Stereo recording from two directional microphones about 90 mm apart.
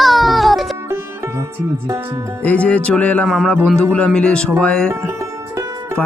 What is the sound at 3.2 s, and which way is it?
A child's voice, centre (ahead or behind).